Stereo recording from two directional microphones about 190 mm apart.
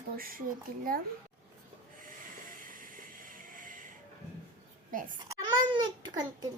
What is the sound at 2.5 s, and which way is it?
Music, 45° right (ahead or behind).